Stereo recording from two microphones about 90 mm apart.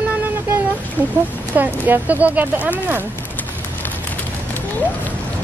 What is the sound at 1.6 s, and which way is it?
Speech, 20° right (ahead or behind).